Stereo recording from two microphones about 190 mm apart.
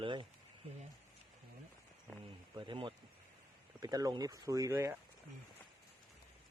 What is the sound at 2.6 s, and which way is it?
Speech, 25° right (ahead or behind).